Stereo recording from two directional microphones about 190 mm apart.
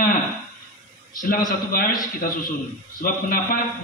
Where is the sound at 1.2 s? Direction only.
50° left (ahead or behind).